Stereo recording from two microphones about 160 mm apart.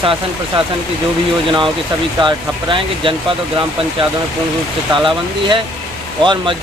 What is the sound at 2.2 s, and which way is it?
Speech, 30° right (ahead or behind).